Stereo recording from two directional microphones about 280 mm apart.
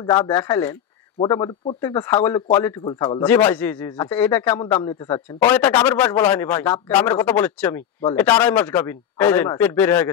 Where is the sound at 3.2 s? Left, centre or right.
Centre.